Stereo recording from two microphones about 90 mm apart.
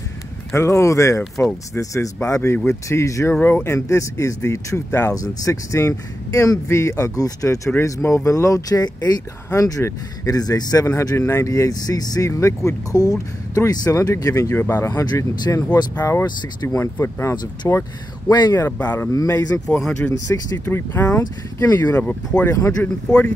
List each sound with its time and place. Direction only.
0.6 s speech: 30° left (ahead or behind)
3.3 s speech: 25° left (ahead or behind); by 10.9 s 45° left (ahead or behind)
10.9 s speech: 30° left (ahead or behind)
14.5 s speech: 25° left (ahead or behind)
14.9 s speech: 35° left (ahead or behind)
18.3 s speech: 55° left (ahead or behind)
18.7 s speech: 20° left (ahead or behind)
20.1 s speech: 40° left (ahead or behind)
20.7 s speech: 20° left (ahead or behind)
21.6 s speech: 35° left (ahead or behind)
21.9 s speech: 20° left (ahead or behind)
22.5 s speech: 35° left (ahead or behind)